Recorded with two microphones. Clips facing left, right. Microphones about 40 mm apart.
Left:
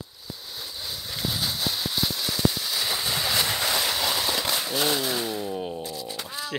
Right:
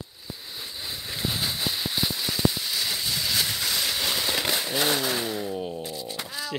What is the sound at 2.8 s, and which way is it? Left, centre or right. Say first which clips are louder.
Vehicle: left 3 dB; centre.